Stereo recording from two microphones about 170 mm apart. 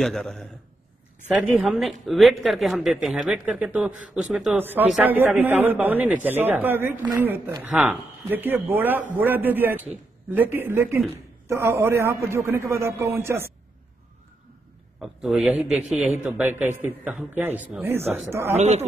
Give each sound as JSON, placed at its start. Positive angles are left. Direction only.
{"t": 0.0, "sound": "a man's voice", "side_deg": 0}
{"t": 15.0, "sound": "a man's voice", "side_deg": 0}
{"t": 18.6, "sound": "speech", "side_deg": -40}